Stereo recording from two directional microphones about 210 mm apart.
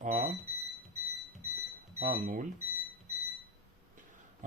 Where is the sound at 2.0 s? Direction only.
35° right (ahead or behind).